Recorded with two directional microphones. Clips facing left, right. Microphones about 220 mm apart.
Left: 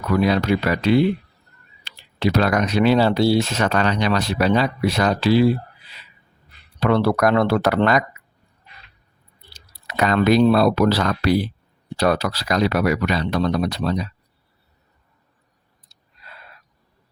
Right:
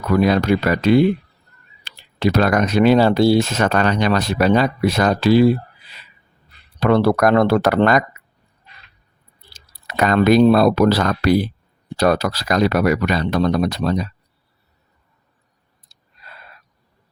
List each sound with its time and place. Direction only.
0.1 s speech: 45° right (ahead or behind)
6.7 s speech: 45° right (ahead or behind)
9.5 s speech: 50° right (ahead or behind)